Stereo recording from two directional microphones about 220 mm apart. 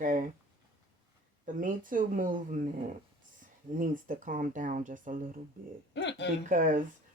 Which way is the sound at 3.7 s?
35° right (ahead or behind).